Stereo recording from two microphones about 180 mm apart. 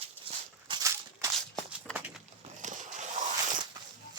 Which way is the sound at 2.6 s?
45° right (ahead or behind).